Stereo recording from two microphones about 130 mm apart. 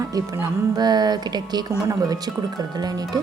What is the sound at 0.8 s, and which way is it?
Speech, 30° right (ahead or behind).